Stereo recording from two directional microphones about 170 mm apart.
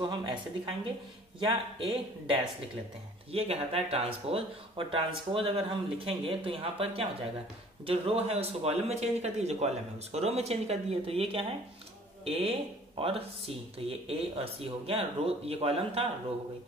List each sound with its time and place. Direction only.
0.0 s speech: 30° right (ahead or behind)